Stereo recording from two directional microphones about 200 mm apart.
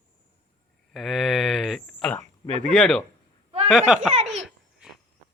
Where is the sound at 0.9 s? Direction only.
Centre (ahead or behind).